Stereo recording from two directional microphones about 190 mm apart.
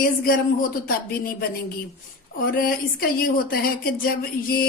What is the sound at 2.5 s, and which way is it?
Speech, 50° left (ahead or behind).